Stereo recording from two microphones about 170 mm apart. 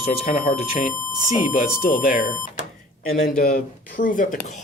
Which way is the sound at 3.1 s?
60° left (ahead or behind).